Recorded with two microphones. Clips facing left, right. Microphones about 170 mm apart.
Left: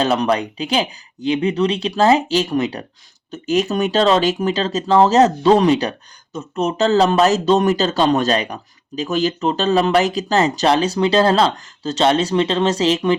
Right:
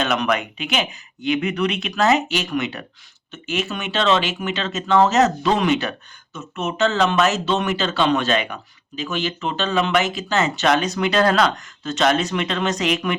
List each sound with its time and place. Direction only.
0.0 s speech: 30° left (ahead or behind)